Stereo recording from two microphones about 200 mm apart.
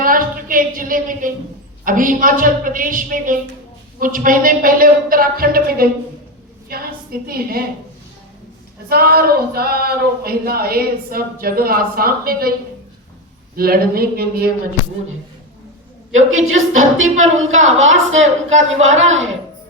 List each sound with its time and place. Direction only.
0.0 s a sound: 45° right (ahead or behind)
1.8 s a woman's voice: 40° right (ahead or behind)
8.9 s speech: 50° right (ahead or behind)
13.6 s speech: 50° right (ahead or behind)
16.1 s a woman's voice: 90° right